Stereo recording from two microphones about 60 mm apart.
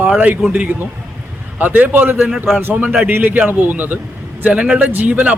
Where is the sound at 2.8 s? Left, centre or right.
Right.